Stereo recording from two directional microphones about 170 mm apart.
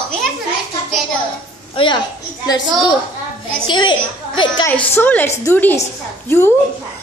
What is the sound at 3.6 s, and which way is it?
A woman's voice, 25° left (ahead or behind).